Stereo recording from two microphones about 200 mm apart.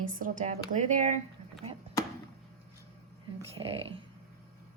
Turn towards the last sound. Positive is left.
turn(degrees=-30)  # may be behind; listen again after turning